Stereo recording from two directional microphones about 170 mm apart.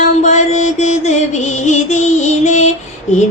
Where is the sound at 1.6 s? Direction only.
45° left (ahead or behind).